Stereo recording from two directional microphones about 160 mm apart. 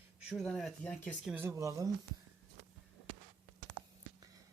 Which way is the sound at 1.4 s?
20° right (ahead or behind).